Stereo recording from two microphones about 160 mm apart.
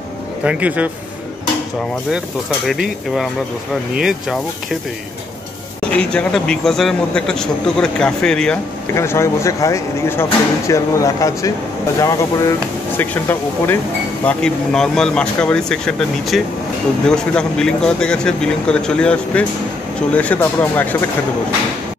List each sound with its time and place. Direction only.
0.4 s speech: 10° right (ahead or behind)
2.1 s speech: centre (ahead or behind)
5.9 s speech: 5° left (ahead or behind)
8.9 s speech: 15° left (ahead or behind)